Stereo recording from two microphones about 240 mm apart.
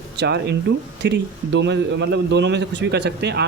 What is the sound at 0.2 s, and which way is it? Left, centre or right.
A man's voice, right.